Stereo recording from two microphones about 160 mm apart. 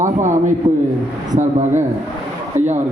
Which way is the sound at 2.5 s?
15° right (ahead or behind).